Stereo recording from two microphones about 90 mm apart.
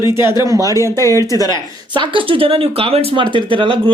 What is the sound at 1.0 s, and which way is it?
Speech, 30° left (ahead or behind).